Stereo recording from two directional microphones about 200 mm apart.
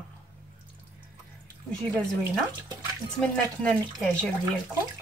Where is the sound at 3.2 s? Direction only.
5° left (ahead or behind).